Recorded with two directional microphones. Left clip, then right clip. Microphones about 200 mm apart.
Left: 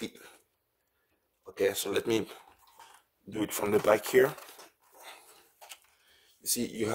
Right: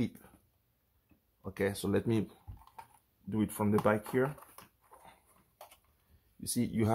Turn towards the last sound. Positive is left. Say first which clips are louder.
# left 2 dB
turn(degrees=20)  # may be behind; listen again after turning